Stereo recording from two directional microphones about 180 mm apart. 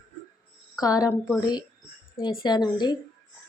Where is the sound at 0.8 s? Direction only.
20° left (ahead or behind).